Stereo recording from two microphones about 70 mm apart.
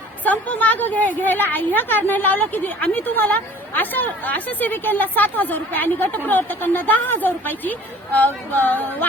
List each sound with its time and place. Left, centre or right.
0.3 s a woman's voice: left